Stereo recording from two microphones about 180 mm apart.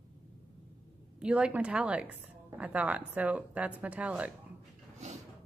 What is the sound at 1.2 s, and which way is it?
A woman's voice, 5° right (ahead or behind).